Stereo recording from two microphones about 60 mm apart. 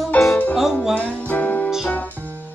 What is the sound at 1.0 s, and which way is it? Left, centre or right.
Music, left.